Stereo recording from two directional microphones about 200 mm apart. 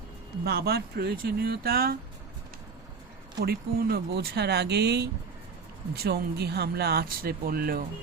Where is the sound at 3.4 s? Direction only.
50° right (ahead or behind).